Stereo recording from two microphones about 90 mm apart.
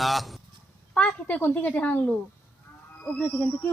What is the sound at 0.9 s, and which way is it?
A woman's voice, 15° left (ahead or behind).